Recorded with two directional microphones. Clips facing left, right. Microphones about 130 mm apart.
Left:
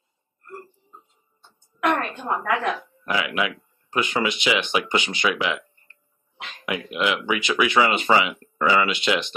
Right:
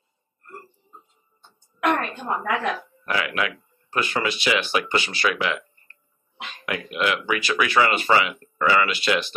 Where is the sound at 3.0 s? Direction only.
15° left (ahead or behind).